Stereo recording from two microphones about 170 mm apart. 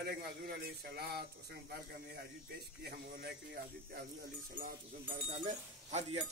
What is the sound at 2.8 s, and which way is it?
Speech, 65° right (ahead or behind).